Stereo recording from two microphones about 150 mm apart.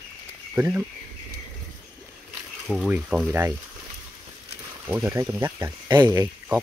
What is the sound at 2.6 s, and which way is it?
Speech, centre (ahead or behind).